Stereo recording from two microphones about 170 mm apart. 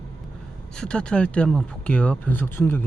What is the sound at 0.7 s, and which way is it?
Speech, 5° left (ahead or behind).